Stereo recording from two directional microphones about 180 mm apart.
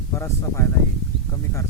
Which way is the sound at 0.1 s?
15° left (ahead or behind).